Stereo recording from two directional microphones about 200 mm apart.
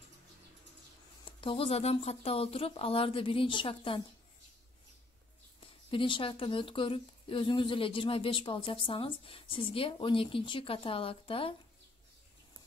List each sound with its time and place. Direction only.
1.2 s speech: 25° left (ahead or behind)
5.9 s speech: 25° left (ahead or behind)